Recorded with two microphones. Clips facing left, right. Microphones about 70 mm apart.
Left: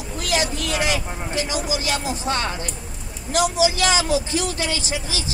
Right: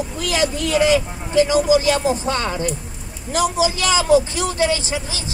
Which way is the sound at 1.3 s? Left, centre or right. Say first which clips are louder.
Right 12 dB; right.